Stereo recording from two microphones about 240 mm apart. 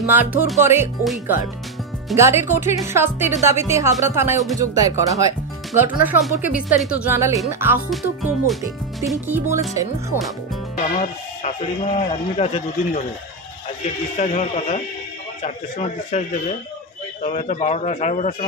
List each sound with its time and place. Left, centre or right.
0.0 s speech: centre
7.9 s speech: centre
10.8 s speech: left
14.1 s speech: left